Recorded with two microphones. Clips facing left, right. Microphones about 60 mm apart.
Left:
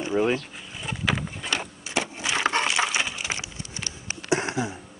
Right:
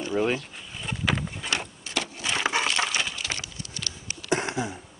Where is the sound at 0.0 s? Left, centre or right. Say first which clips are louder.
Left 2 dB; centre.